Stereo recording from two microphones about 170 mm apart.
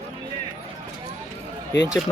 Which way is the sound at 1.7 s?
90° left.